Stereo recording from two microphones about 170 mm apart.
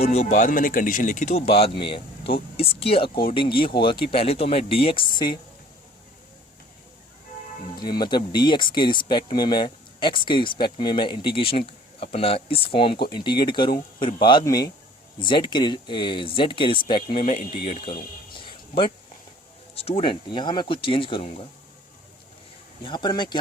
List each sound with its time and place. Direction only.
0.0 s speech: 35° left (ahead or behind)
7.8 s speech: 25° left (ahead or behind)
18.3 s a sound: 30° left (ahead or behind)
19.7 s speech: 35° left (ahead or behind)
22.8 s speech: 25° left (ahead or behind)